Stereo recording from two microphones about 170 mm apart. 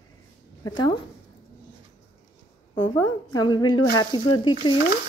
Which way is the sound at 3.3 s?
25° left (ahead or behind).